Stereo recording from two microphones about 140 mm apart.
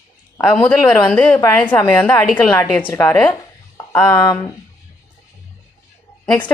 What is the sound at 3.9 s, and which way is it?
Speech, 25° left (ahead or behind).